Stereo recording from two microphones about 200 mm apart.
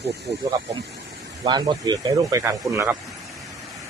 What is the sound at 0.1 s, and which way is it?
Speech, 55° right (ahead or behind).